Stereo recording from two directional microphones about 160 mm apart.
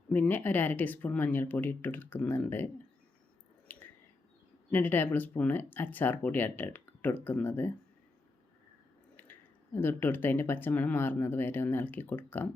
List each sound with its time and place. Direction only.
0.1 s speech: 10° left (ahead or behind)
3.7 s a sound: 10° left (ahead or behind)
4.7 s speech: 10° left (ahead or behind)
9.7 s speech: 15° left (ahead or behind)